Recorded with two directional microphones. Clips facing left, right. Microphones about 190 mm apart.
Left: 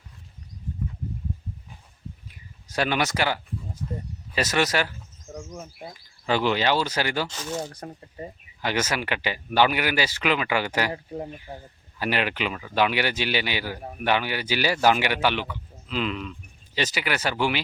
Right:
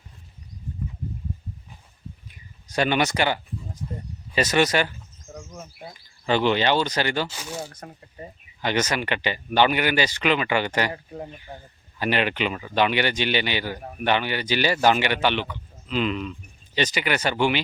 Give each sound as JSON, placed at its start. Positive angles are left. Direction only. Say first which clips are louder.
{"t": 2.6, "sound": "speech", "louder": "right 3 dB", "side_deg": 0}
{"t": 3.8, "sound": "speech", "louder": "left 2 dB", "side_deg": -15}
{"t": 4.4, "sound": "speech", "louder": "right 3 dB", "side_deg": 0}
{"t": 6.2, "sound": "speech", "louder": "right 2 dB", "side_deg": 5}
{"t": 7.3, "sound": "speech", "louder": "left 3 dB", "side_deg": -10}
{"t": 8.6, "sound": "speech", "louder": "right 2 dB", "side_deg": 5}
{"t": 10.9, "sound": "speech", "louder": "left 2 dB", "side_deg": 20}
{"t": 11.5, "sound": "a man's voice", "louder": "left 1 dB", "side_deg": 10}